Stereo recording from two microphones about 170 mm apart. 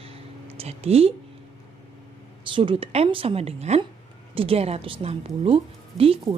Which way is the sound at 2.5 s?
30° right (ahead or behind).